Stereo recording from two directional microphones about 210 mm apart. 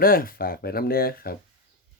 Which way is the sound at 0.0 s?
45° left (ahead or behind).